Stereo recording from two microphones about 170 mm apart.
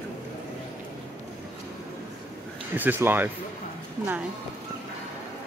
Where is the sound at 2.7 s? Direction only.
10° right (ahead or behind).